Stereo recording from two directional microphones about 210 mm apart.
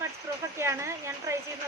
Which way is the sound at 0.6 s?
15° right (ahead or behind).